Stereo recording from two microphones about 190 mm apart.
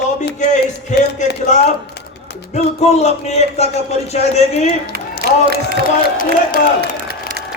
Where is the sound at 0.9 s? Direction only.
40° left (ahead or behind).